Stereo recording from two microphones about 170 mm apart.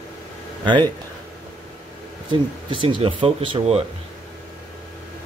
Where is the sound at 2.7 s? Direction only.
30° right (ahead or behind).